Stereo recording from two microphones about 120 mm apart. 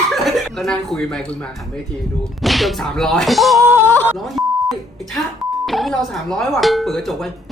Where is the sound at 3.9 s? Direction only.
20° left (ahead or behind).